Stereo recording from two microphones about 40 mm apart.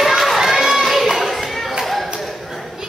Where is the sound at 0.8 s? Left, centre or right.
Centre.